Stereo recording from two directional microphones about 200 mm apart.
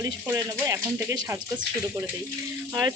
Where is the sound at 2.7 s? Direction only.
20° right (ahead or behind).